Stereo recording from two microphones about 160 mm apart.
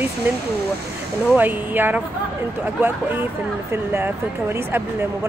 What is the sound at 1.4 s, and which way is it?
Speech, 10° right (ahead or behind).